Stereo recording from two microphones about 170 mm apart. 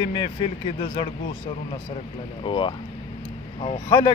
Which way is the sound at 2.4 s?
30° left (ahead or behind).